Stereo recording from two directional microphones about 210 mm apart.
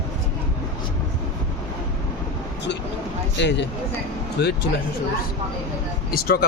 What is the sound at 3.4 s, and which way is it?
Speech, 55° left (ahead or behind).